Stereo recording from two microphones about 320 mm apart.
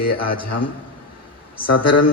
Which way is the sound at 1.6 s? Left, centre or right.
Left.